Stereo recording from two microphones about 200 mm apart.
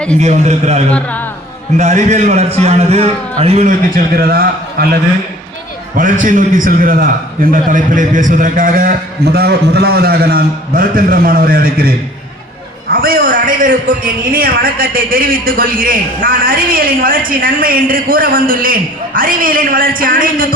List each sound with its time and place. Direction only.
0.2 s a man's voice: 35° right (ahead or behind)
0.9 s speech: 5° left (ahead or behind)
1.7 s a man's voice: 35° right (ahead or behind)
6.0 s a man's voice: 40° right (ahead or behind)